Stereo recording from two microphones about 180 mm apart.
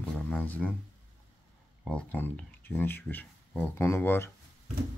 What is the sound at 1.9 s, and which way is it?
Speech, 10° left (ahead or behind).